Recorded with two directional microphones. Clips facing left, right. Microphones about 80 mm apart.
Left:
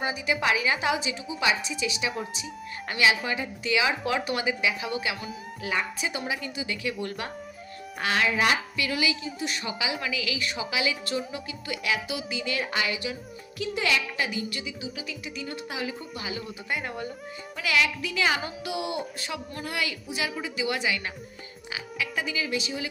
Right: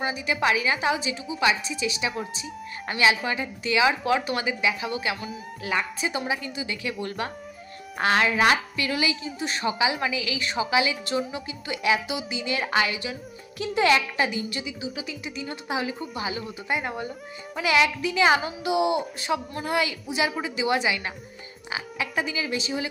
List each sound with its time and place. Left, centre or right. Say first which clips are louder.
0.3 s a woman's voice: right 2 dB; right
8.7 s a woman's voice: right 1 dB; right
15.7 s a woman's voice: right 8 dB; right